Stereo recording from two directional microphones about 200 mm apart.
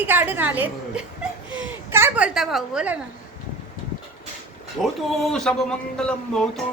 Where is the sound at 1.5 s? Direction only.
10° right (ahead or behind).